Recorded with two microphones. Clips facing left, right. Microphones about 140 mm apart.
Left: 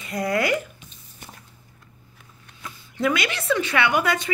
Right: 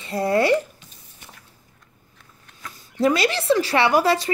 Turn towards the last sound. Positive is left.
turn(degrees=-35)  # may be behind; listen again after turning